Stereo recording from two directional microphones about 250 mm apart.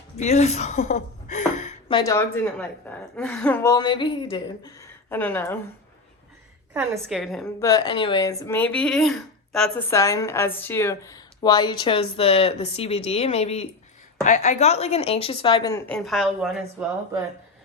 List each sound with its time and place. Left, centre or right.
0.2 s a woman's voice: left
2.0 s speech: centre
6.7 s a woman's voice: centre
7.6 s speech: centre
15.9 s a woman's voice: centre